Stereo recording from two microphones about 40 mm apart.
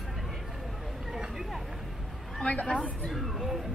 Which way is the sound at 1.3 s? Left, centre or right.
Centre.